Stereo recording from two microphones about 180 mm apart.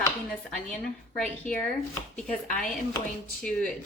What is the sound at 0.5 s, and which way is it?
Speech, 5° left (ahead or behind).